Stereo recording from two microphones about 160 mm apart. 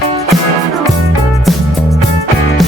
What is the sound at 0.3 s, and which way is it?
Music, centre (ahead or behind).